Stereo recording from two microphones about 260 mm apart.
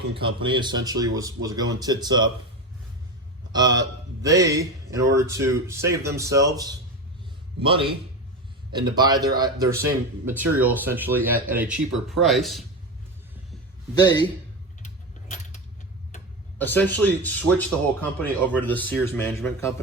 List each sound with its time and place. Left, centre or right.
0.2 s speech: centre
3.5 s a man's voice: centre
13.9 s speech: centre
14.8 s keys jangling: left
16.6 s speech: centre